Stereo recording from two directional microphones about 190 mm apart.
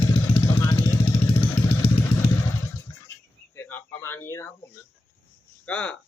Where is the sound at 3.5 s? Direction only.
10° left (ahead or behind).